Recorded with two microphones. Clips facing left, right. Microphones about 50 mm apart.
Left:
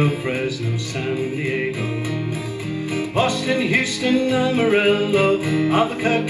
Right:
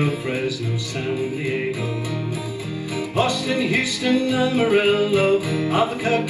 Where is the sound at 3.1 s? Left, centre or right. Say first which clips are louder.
Left 1 dB; left.